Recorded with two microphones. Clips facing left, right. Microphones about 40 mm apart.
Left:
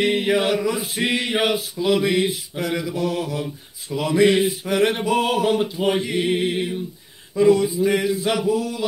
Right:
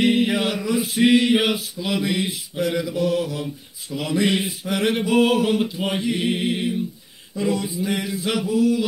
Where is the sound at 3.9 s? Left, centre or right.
Left.